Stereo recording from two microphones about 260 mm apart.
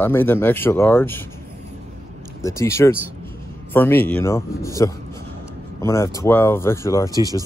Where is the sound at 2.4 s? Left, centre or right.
Centre.